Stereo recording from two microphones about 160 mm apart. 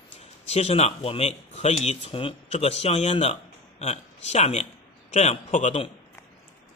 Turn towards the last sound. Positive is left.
turn(degrees=45)  # may be behind; listen again after turning